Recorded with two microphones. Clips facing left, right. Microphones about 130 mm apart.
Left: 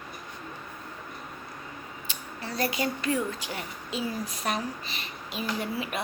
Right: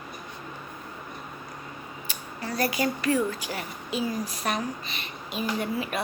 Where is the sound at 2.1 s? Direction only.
25° left (ahead or behind).